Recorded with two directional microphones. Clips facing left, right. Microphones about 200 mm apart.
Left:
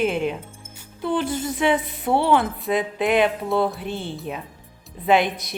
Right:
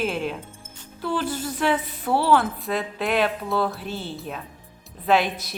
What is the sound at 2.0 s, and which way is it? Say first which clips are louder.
Speech: left 2 dB; 25° left (ahead or behind).